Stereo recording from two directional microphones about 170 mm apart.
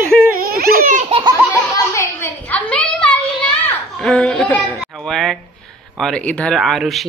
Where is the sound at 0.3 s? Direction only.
60° right (ahead or behind).